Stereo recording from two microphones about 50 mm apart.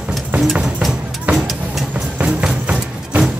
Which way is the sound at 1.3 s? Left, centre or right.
Right.